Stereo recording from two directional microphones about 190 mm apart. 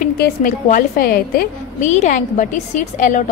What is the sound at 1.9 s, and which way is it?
A woman's voice, 40° left (ahead or behind).